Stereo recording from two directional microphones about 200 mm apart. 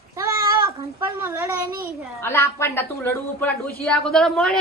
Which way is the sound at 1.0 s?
10° right (ahead or behind).